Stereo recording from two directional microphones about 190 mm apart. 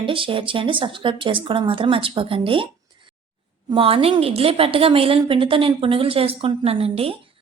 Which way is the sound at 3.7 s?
30° right (ahead or behind).